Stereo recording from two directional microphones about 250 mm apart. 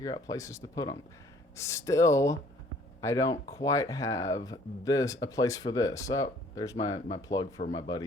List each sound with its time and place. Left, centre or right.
0.0 s speech: centre